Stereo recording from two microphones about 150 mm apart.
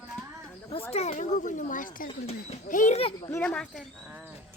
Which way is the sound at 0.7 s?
40° left (ahead or behind).